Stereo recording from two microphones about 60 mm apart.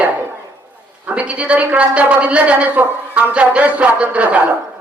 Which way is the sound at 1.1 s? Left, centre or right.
Right.